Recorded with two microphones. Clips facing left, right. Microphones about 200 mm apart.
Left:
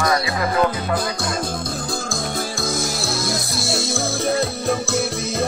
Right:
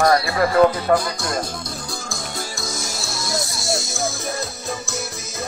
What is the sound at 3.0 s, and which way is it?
Music, 55° left (ahead or behind).